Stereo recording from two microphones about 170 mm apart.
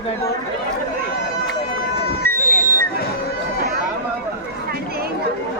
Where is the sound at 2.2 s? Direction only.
55° right (ahead or behind).